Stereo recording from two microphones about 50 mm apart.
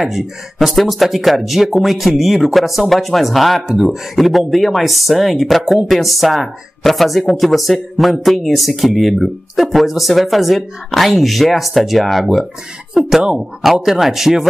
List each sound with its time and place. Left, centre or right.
0.0 s speech: centre